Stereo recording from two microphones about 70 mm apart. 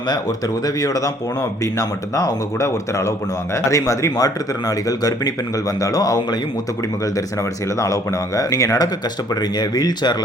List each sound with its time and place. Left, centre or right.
0.8 s speech: left
4.9 s speech: left
8.4 s speech: left
9.3 s speech: left